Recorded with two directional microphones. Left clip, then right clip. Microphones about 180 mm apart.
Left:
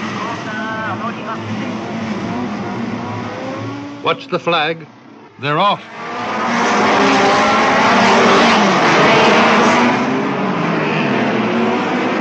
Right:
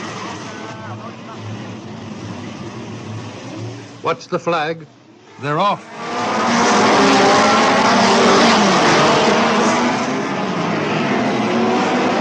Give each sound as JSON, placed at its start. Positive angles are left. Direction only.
{"t": 4.0, "sound": "a man's voice", "side_deg": -20}
{"t": 6.1, "sound": "vehicle", "side_deg": -35}